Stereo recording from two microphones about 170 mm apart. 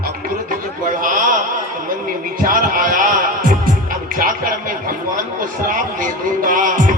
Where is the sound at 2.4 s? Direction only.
55° right (ahead or behind).